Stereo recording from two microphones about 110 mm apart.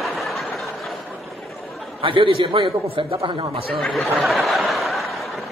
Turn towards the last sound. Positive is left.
turn(degrees=0)  # may be behind; listen again after turning